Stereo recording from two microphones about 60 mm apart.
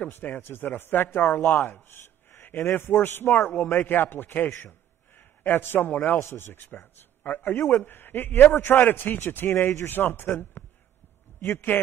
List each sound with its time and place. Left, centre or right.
0.0 s a man's voice: left
4.6 s a sound: left
6.1 s a man's voice: left